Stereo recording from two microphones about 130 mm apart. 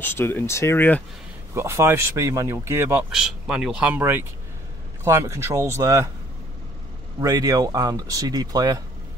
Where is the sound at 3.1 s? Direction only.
5° right (ahead or behind); by 6.1 s 25° right (ahead or behind).